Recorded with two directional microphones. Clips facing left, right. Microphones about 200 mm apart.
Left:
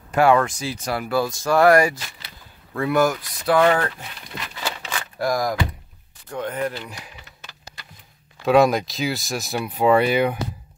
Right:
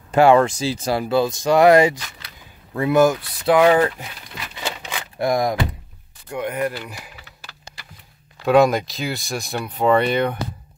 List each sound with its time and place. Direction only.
0.1 s speech: 25° right (ahead or behind)
3.5 s speech: 15° right (ahead or behind)
4.6 s a sound: 15° right (ahead or behind)
6.3 s speech: 10° right (ahead or behind)
8.5 s speech: centre (ahead or behind)